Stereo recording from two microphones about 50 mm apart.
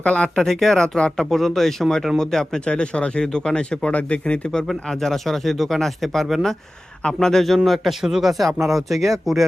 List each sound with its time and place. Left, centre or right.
0.0 s speech: left
0.4 s a man's voice: centre
4.7 s a man's voice: centre